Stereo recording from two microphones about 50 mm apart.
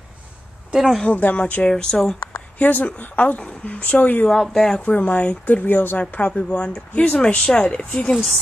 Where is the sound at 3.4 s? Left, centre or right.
Left.